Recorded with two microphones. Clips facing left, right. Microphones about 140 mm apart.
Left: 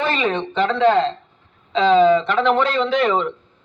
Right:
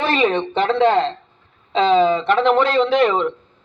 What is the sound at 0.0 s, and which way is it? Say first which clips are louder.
A man's voice: right 3 dB; 25° right (ahead or behind).